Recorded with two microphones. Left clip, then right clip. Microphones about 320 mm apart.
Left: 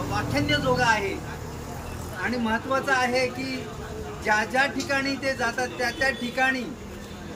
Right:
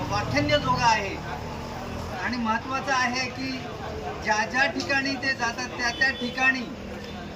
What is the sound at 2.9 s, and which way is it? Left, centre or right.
Speech, centre.